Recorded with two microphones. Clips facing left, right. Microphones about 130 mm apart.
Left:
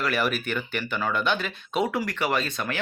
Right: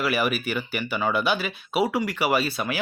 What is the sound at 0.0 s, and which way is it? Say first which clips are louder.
Speech: right 2 dB; 5° right (ahead or behind).